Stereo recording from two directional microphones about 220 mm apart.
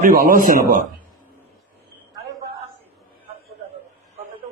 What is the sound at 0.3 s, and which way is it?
Speech, 40° right (ahead or behind).